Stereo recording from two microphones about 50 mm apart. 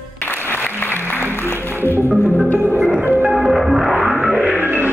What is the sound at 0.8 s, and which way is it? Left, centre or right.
Music, left.